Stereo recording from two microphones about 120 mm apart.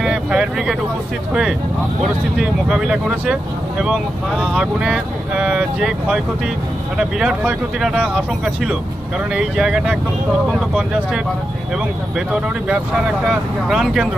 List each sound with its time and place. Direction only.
0.0 s vehicle: 5° right (ahead or behind)
2.3 s speech: 5° right (ahead or behind)
12.3 s speech: 10° right (ahead or behind)